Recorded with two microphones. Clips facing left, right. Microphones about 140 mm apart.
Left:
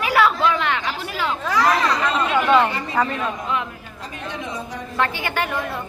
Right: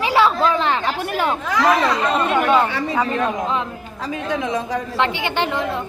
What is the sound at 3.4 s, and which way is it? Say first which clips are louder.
Speech: right 3 dB; 30° right (ahead or behind).